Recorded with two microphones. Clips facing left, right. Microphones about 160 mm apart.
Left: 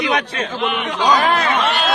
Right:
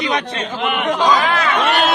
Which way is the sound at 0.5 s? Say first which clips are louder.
Right 4 dB; 55° right (ahead or behind).